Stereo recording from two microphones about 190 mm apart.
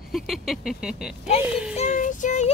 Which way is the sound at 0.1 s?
Centre (ahead or behind).